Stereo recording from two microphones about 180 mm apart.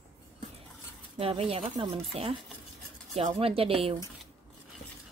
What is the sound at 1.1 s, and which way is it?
Speech, 35° right (ahead or behind).